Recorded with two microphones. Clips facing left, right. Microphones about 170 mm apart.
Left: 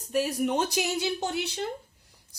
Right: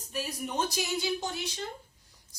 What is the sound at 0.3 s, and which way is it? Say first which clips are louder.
Speech: left 6 dB; 65° left (ahead or behind).